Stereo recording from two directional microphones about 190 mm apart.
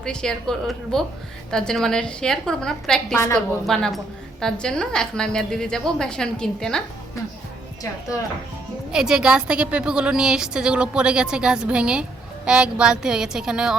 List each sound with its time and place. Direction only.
0.0 s a woman's voice: 5° left (ahead or behind)
8.9 s a woman's voice: 5° right (ahead or behind)